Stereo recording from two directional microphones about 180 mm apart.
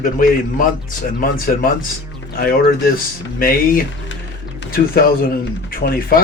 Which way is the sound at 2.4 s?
55° left (ahead or behind).